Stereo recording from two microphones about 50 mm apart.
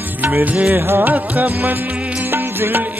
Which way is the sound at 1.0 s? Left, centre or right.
Right.